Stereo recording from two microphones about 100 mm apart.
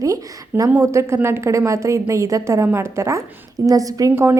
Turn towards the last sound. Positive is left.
turn(degrees=-25)  # may be behind; listen again after turning